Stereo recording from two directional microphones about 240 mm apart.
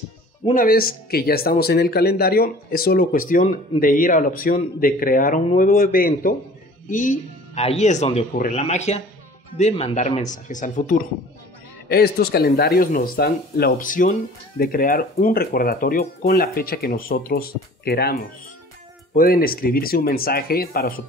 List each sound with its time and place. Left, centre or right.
0.5 s speech: left
19.1 s speech: left